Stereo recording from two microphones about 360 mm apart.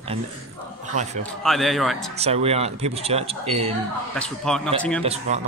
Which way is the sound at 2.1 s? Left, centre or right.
Centre.